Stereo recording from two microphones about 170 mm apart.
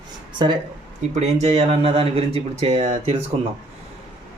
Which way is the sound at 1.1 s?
40° right (ahead or behind).